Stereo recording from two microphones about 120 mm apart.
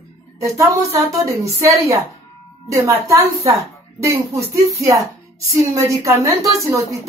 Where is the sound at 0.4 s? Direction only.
25° right (ahead or behind).